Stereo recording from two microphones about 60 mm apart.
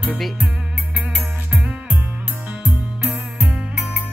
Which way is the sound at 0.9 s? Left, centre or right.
Right.